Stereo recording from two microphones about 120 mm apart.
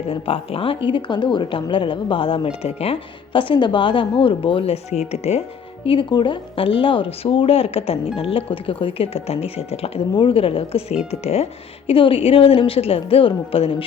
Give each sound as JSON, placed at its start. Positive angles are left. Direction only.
{"t": 0.1, "sound": "speech", "side_deg": 50}
{"t": 5.8, "sound": "speech", "side_deg": 45}
{"t": 10.2, "sound": "speech", "side_deg": 50}
{"t": 11.9, "sound": "speech", "side_deg": 50}